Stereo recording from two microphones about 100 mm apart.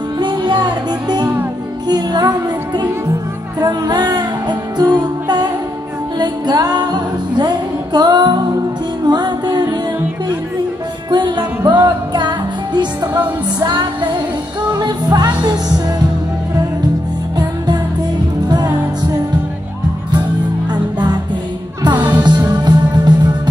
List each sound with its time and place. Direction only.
0.2 s music: 50° right (ahead or behind)
11.1 s music: 50° right (ahead or behind)
21.9 s music: 15° right (ahead or behind)
22.2 s music: 45° right (ahead or behind)